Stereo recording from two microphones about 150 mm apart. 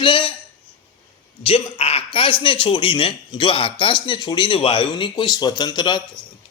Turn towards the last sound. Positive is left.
turn(degrees=30)  # may be behind; listen again after turning